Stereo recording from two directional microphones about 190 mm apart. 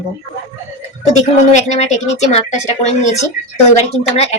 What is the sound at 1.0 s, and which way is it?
A woman's voice, 35° left (ahead or behind).